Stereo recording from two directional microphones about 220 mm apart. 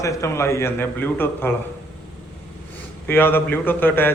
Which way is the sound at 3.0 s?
10° left (ahead or behind).